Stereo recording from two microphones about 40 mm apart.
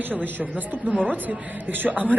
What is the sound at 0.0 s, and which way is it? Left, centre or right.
A woman's voice, right.